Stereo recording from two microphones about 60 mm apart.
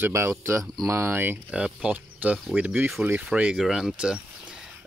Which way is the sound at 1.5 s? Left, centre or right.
Centre.